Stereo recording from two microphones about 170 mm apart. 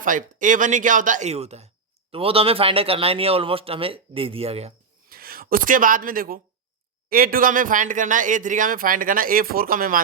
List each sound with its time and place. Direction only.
0.0 s speech: 50° right (ahead or behind); by 4.7 s 35° right (ahead or behind)
5.0 s speech: 60° right (ahead or behind)